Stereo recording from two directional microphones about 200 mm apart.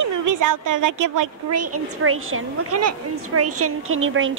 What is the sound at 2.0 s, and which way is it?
A woman's voice, 90° right.